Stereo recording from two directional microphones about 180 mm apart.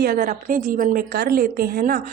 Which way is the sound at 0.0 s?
50° right (ahead or behind).